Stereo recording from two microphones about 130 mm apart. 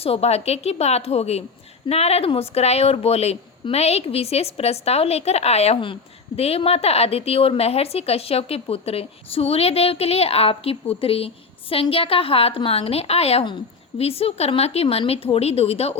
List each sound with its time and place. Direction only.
0.0 s a woman's voice: 50° left (ahead or behind)